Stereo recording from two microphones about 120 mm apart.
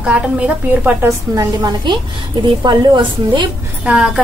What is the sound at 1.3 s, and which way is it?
A woman's voice, 35° right (ahead or behind).